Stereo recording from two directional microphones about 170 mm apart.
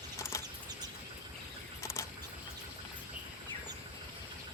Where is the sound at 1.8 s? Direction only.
15° left (ahead or behind).